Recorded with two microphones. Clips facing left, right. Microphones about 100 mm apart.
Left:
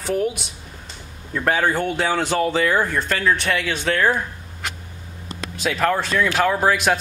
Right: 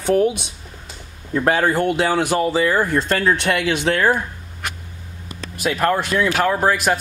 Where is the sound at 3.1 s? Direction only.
35° right (ahead or behind).